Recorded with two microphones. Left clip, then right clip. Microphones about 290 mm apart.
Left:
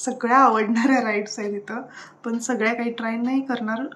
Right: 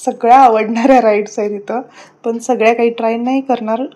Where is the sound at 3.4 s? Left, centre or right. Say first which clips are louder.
Right 11 dB; right.